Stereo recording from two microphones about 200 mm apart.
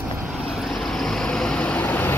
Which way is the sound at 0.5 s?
Centre (ahead or behind).